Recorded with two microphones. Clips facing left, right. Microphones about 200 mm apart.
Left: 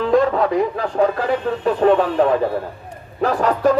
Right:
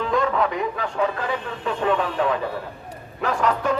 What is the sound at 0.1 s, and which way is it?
Speech, 35° left (ahead or behind).